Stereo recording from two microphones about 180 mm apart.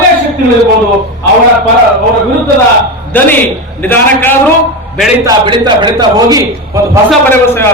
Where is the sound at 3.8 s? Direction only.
10° left (ahead or behind).